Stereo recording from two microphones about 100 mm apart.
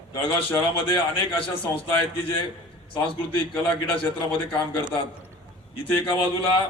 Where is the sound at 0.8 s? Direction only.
60° left (ahead or behind).